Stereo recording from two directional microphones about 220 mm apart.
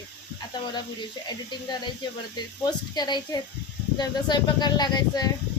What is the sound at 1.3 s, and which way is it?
Speech, 20° left (ahead or behind).